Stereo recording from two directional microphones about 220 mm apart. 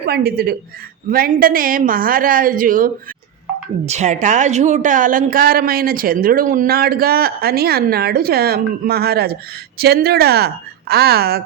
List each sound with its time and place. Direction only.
0.0 s a woman's voice: 45° right (ahead or behind)